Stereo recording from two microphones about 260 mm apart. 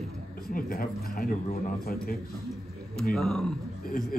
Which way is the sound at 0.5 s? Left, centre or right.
Left.